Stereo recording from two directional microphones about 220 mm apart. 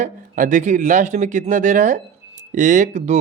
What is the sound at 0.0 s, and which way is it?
Speech, 35° right (ahead or behind).